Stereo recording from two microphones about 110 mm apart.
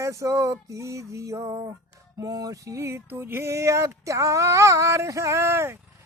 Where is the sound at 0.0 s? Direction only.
30° right (ahead or behind).